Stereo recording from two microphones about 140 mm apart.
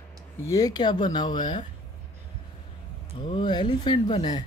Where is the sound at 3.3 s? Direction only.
35° left (ahead or behind).